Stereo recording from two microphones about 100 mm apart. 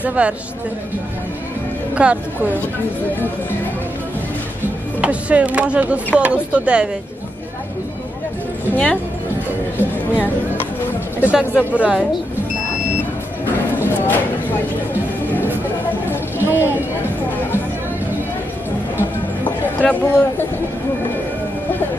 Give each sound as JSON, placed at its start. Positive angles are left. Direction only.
{"t": 0.0, "sound": "speech", "side_deg": -15}
{"t": 2.0, "sound": "speech", "side_deg": -15}
{"t": 5.0, "sound": "speech", "side_deg": -15}
{"t": 8.6, "sound": "speech", "side_deg": 15}
{"t": 11.3, "sound": "speech", "side_deg": -10}
{"t": 13.8, "sound": "a sound", "side_deg": 20}
{"t": 16.4, "sound": "a sound", "side_deg": -20}
{"t": 19.8, "sound": "speech", "side_deg": 15}